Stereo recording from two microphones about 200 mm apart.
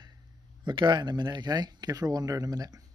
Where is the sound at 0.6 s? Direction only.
20° right (ahead or behind).